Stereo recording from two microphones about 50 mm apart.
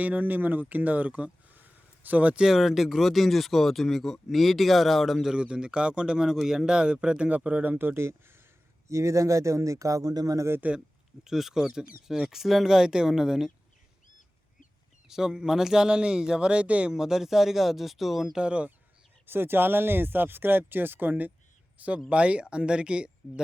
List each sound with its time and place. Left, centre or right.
0.0 s speech: right
1.5 s a sound: right
2.4 s speech: centre
5.3 s speech: centre
7.3 s speech: right
7.9 s speech: right
8.9 s speech: right
11.2 s speech: centre
15.0 s speech: centre
16.9 s speech: centre
18.3 s speech: right
19.2 s speech: right